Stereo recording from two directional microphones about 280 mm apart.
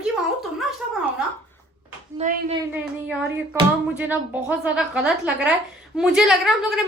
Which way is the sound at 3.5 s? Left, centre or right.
Centre.